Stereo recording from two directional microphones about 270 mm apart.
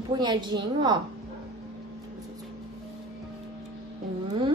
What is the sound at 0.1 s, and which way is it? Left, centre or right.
Speech, centre.